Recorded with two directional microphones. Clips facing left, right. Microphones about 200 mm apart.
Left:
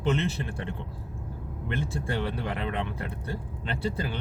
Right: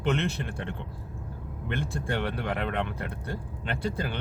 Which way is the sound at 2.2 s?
65° right (ahead or behind).